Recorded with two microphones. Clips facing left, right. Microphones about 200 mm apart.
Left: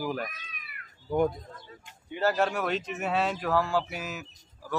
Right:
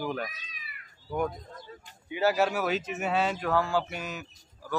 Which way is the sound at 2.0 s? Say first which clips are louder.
Right 1 dB; 5° right (ahead or behind).